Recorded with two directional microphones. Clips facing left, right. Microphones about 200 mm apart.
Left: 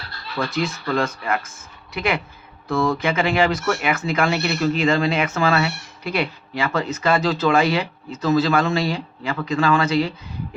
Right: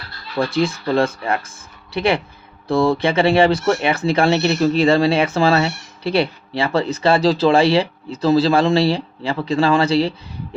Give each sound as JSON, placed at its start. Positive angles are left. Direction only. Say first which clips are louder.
{"t": 0.3, "sound": "speech", "louder": "right 5 dB", "side_deg": -30}